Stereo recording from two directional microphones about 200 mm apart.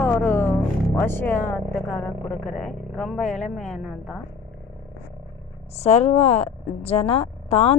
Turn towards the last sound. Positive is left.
turn(degrees=30)  # may be behind; listen again after turning